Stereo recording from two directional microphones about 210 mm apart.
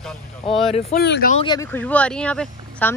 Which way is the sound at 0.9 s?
45° left (ahead or behind).